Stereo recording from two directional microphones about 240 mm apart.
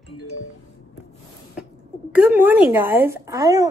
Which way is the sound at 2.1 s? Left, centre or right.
Centre.